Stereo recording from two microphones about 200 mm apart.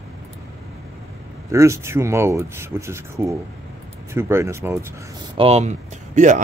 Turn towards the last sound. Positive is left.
turn(degrees=-35)  # may be behind; listen again after turning